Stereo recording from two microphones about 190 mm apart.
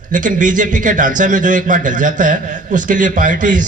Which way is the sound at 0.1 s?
45° right (ahead or behind).